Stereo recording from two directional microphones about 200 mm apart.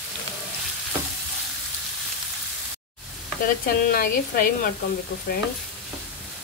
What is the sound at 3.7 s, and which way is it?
Frying, 45° left (ahead or behind).